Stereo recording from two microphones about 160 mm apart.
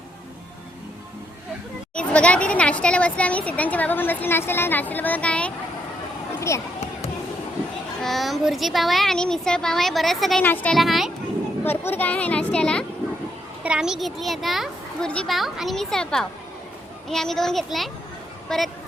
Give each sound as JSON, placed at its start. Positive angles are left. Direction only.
{"t": 2.0, "sound": "speech", "side_deg": 5}
{"t": 6.5, "sound": "speech", "side_deg": 15}
{"t": 8.0, "sound": "a child's voice", "side_deg": 0}
{"t": 11.6, "sound": "speech", "side_deg": 15}
{"t": 13.6, "sound": "a child's voice", "side_deg": -5}